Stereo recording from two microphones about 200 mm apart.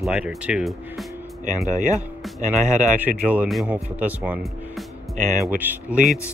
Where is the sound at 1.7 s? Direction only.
40° right (ahead or behind).